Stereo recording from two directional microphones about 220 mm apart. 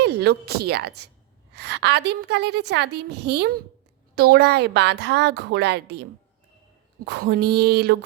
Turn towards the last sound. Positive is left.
turn(degrees=-45)  # may be behind; listen again after turning